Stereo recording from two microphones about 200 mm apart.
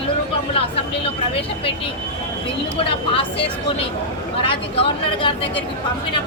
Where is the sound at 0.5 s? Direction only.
30° left (ahead or behind).